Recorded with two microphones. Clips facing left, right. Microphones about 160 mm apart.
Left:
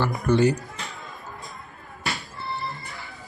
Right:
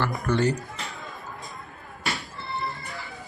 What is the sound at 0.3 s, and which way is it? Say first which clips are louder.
Speech: left 4 dB; 10° left (ahead or behind).